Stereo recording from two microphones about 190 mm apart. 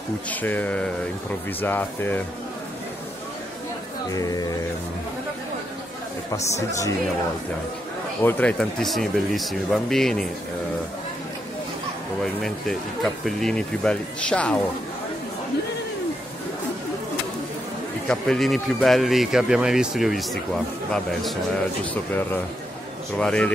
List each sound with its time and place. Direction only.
0.3 s speech: 10° left (ahead or behind)
4.1 s speech: 20° left (ahead or behind)
8.2 s speech: 10° left (ahead or behind)
12.4 s speech: centre (ahead or behind)
18.0 s speech: 5° left (ahead or behind)
23.1 s speech: 5° left (ahead or behind)